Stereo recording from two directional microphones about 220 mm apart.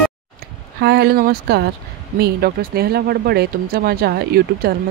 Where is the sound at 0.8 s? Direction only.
50° right (ahead or behind).